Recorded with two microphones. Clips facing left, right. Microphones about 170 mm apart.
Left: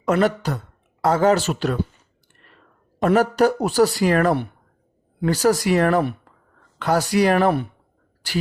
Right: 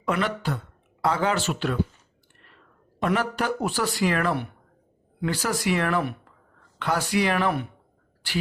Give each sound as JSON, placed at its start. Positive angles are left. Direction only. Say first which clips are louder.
{"t": 0.0, "sound": "speech", "louder": "left 7 dB", "side_deg": 40}
{"t": 3.0, "sound": "speech", "louder": "left 8 dB", "side_deg": 40}